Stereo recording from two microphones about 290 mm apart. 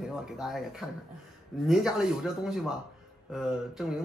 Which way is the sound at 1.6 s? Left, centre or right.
Centre.